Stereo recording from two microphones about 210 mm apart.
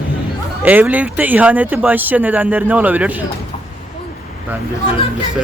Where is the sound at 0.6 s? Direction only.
10° right (ahead or behind).